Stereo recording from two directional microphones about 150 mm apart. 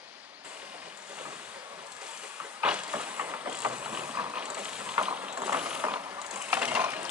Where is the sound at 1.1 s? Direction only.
10° right (ahead or behind).